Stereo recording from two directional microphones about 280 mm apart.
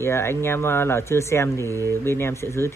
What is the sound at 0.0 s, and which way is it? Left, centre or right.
Speech, centre.